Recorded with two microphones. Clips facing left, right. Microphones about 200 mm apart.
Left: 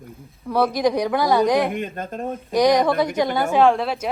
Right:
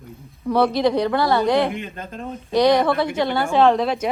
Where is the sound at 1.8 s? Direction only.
50° left (ahead or behind).